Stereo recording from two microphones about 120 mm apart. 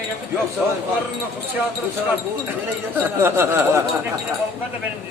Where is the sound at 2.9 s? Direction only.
15° right (ahead or behind).